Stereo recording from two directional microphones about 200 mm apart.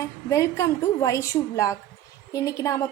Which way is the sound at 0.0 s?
15° left (ahead or behind).